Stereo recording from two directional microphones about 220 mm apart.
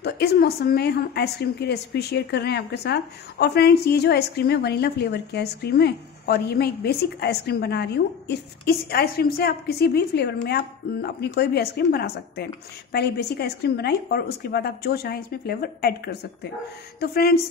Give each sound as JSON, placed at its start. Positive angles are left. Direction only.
{"t": 0.0, "sound": "a woman's voice", "side_deg": 45}